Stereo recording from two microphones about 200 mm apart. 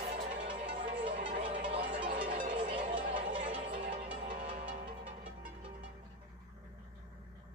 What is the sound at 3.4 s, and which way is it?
Music, 35° right (ahead or behind).